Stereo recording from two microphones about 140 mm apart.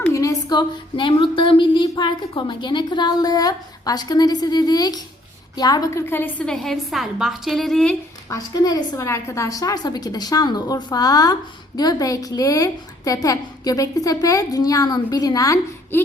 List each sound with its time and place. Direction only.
0.0 s a woman's voice: 20° left (ahead or behind)
6.1 s a woman's voice: 15° left (ahead or behind)
8.3 s a woman's voice: 25° left (ahead or behind)